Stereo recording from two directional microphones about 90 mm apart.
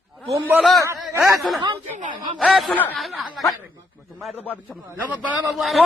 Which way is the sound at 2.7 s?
20° left (ahead or behind).